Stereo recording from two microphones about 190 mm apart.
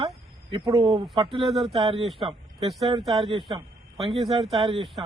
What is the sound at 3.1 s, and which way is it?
Speech, 25° right (ahead or behind).